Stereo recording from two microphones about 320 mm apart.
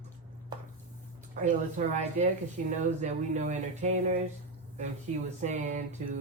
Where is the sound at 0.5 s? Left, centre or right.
Centre.